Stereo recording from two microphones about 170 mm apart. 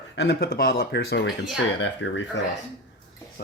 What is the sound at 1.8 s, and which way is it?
Speech, 90° left.